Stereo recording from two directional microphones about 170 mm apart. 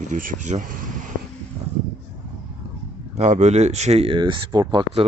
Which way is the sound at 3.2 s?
45° right (ahead or behind).